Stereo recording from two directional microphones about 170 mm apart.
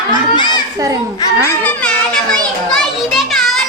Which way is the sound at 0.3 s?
25° left (ahead or behind).